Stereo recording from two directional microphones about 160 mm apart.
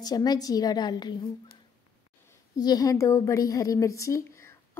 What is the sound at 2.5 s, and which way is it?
A woman's voice, 25° left (ahead or behind).